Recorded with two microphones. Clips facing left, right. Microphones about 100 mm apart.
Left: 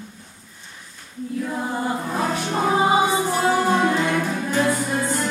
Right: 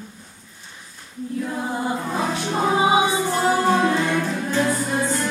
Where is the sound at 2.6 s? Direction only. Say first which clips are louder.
Even; 10° right (ahead or behind).